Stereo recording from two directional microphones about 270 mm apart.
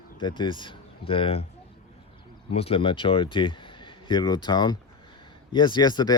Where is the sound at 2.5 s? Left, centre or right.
Left.